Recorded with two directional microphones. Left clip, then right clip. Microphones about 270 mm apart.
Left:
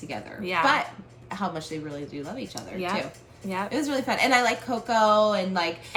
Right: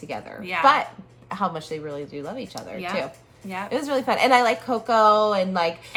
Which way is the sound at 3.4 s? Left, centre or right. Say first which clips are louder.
Left 1 dB; centre.